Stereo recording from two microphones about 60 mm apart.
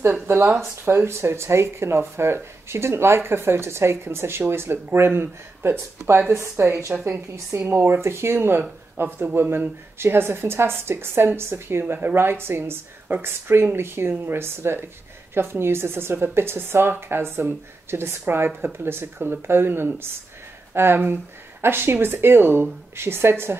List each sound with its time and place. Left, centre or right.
0.0 s speech: right
6.5 s speech: right